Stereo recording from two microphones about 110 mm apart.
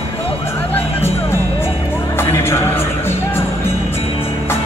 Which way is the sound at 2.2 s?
25° left (ahead or behind).